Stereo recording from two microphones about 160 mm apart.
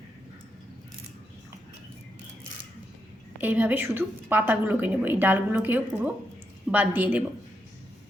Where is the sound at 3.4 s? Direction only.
10° right (ahead or behind).